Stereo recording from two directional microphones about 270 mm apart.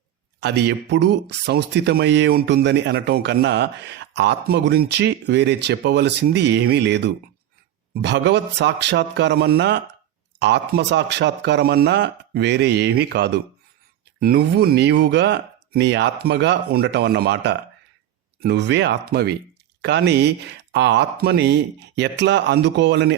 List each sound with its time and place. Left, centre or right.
0.3 s speech: right